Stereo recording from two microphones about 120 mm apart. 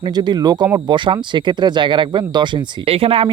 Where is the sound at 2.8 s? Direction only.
55° right (ahead or behind).